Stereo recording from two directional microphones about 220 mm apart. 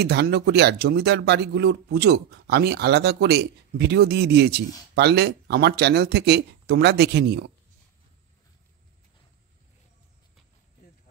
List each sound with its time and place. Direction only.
0.0 s speech: 45° right (ahead or behind)